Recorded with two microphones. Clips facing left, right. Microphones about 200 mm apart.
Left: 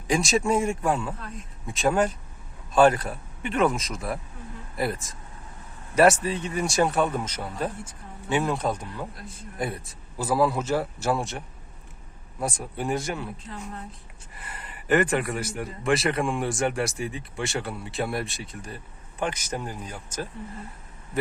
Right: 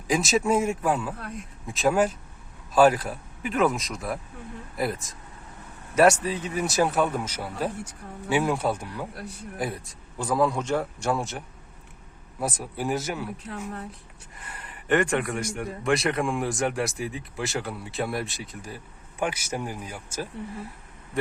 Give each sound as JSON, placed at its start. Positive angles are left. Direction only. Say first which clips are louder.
{"t": 0.1, "sound": "speech", "louder": "even", "side_deg": 0}
{"t": 9.1, "sound": "a man's voice", "louder": "right 5 dB", "side_deg": -70}
{"t": 9.6, "sound": "speech", "louder": "left 1 dB", "side_deg": 0}
{"t": 14.3, "sound": "speech", "louder": "left 1 dB", "side_deg": 5}